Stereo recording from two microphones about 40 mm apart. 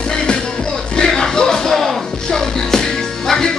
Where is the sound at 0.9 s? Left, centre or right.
Centre.